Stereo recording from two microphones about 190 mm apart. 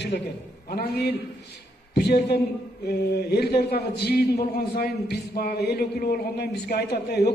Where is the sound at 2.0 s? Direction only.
60° left (ahead or behind).